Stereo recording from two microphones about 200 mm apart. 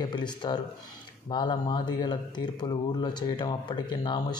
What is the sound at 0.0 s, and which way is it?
Speech, 20° left (ahead or behind).